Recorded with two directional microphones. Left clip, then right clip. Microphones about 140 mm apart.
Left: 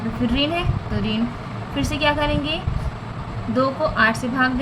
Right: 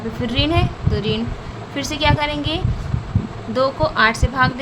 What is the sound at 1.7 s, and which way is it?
A woman's voice, 65° right (ahead or behind).